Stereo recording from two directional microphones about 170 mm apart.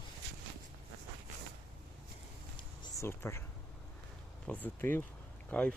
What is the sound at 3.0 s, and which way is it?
Speech, 15° left (ahead or behind).